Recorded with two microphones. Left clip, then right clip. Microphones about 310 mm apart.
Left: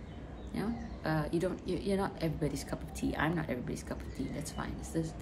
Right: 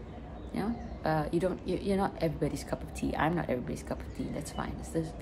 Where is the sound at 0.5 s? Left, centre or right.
Centre.